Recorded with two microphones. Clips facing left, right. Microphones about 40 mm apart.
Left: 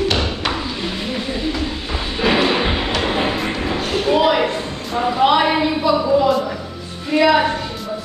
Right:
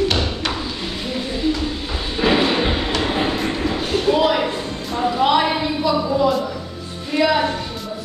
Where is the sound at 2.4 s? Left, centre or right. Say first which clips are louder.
Left 1 dB; centre.